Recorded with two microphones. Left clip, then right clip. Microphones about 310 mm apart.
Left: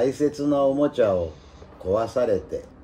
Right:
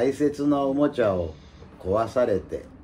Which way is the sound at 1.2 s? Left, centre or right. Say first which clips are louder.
Left 3 dB; left.